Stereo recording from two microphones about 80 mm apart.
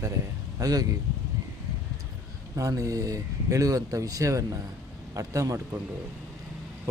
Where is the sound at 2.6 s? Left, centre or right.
Right.